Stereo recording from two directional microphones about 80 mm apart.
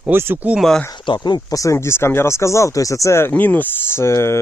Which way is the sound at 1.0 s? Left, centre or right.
Left.